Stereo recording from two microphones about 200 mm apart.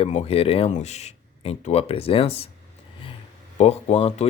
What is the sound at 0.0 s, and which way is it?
Speech, 30° left (ahead or behind).